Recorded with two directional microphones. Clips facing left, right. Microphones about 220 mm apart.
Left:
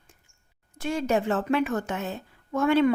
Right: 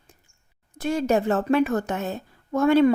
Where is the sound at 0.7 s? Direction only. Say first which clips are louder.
Right 3 dB; 40° right (ahead or behind).